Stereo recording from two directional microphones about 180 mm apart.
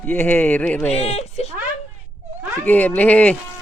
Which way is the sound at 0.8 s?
35° left (ahead or behind).